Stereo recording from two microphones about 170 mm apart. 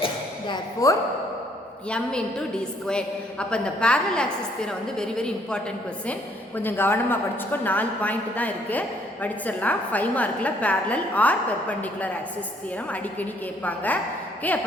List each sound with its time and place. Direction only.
0.0 s a sound: 25° left (ahead or behind)
2.8 s a woman's voice: 5° left (ahead or behind)
13.7 s a woman's voice: 10° left (ahead or behind)